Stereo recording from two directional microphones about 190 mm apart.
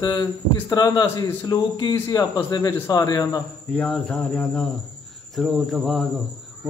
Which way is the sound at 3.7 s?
5° left (ahead or behind).